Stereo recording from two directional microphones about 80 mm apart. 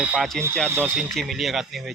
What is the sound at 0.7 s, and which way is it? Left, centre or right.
Speech, right.